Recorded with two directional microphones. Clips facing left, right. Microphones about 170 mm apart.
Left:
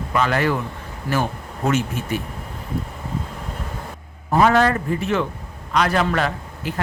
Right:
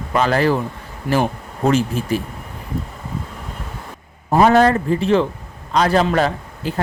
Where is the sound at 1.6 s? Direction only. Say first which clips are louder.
Right 4 dB; 35° right (ahead or behind).